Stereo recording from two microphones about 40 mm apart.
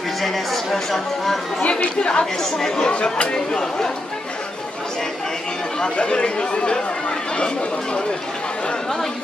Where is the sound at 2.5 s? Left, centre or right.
Centre.